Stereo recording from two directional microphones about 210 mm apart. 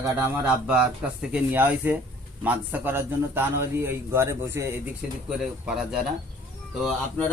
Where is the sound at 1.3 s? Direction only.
10° right (ahead or behind).